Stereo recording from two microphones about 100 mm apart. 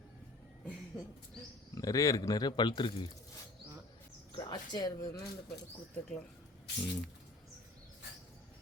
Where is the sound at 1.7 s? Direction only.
35° left (ahead or behind); by 3.1 s 60° left (ahead or behind).